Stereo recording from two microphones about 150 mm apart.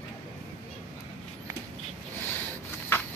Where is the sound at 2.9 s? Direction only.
15° left (ahead or behind).